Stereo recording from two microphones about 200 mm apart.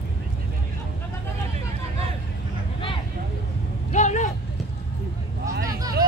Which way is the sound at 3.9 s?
35° left (ahead or behind).